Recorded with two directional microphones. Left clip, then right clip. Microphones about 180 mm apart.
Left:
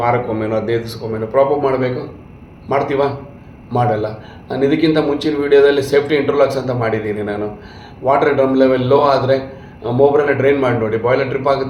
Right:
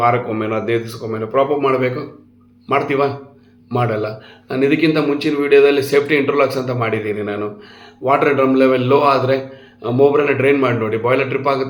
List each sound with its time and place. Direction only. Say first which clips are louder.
0.3 s a man's voice: left 1 dB; 15° right (ahead or behind)